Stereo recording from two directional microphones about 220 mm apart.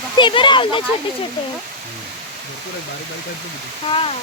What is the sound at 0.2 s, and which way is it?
Speech, 20° left (ahead or behind).